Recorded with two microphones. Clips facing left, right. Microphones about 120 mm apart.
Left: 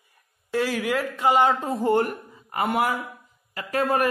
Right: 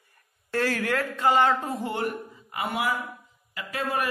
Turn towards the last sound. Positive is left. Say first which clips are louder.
# left 6 dB
turn(degrees=45)  # may be behind; listen again after turning